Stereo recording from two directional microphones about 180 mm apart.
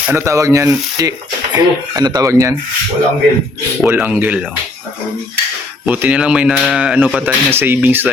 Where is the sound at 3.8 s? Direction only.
10° right (ahead or behind).